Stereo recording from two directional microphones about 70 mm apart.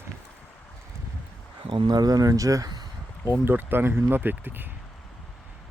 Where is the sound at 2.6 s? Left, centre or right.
Right.